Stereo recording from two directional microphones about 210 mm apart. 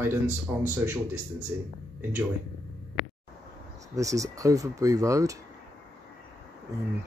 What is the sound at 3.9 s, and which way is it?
Speech, 15° right (ahead or behind).